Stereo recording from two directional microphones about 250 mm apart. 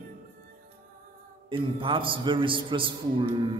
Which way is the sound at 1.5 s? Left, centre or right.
Right.